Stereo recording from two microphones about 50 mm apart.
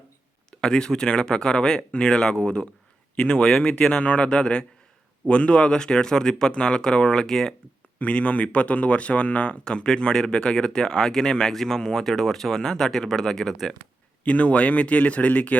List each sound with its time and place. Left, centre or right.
0.5 s a man's voice: centre
7.9 s speech: left; by 13.7 s centre
14.3 s a man's voice: left